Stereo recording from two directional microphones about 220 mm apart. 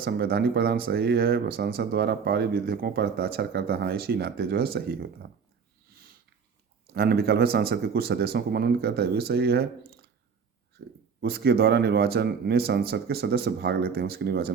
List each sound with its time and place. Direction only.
0.0 s speech: 45° right (ahead or behind)
6.9 s speech: 45° right (ahead or behind)
11.2 s speech: 45° right (ahead or behind)